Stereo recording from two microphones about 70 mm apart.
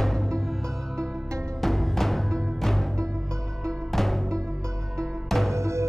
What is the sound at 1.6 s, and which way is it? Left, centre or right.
Music, centre.